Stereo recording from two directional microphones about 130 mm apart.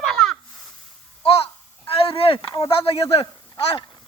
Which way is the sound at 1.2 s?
45° left (ahead or behind).